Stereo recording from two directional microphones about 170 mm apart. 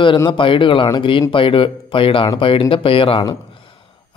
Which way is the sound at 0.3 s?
30° left (ahead or behind).